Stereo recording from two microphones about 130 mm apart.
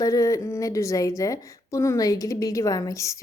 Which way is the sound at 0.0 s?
25° left (ahead or behind).